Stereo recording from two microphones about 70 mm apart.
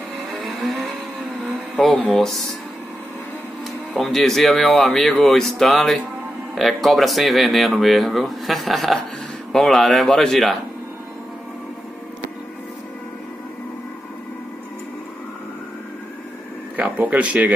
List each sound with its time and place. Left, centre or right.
0.4 s vehicle: centre
1.8 s speech: centre
4.0 s speech: centre
16.7 s speech: right